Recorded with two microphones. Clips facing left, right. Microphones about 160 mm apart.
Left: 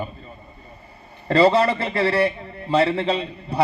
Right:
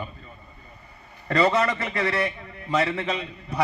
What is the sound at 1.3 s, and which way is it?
A man's voice, 30° left (ahead or behind).